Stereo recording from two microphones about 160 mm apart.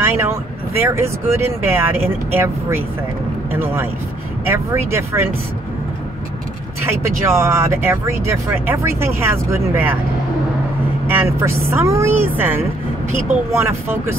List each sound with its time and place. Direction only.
0.0 s speech: 15° right (ahead or behind)
3.5 s speech: 15° right (ahead or behind)
6.8 s speech: 15° right (ahead or behind)
11.1 s speech: 15° right (ahead or behind)